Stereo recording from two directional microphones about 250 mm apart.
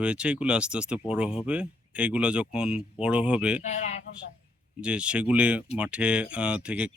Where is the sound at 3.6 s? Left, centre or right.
Left.